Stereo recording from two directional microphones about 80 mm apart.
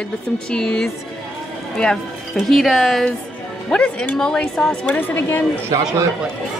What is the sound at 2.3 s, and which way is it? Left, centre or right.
Speech, centre.